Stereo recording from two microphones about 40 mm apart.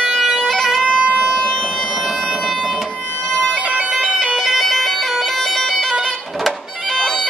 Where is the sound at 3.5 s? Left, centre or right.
Right.